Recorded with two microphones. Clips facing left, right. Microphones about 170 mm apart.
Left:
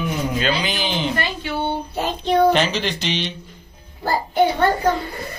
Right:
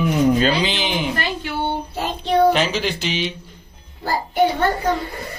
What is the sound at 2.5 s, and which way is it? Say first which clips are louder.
Speech: even; 5° right (ahead or behind).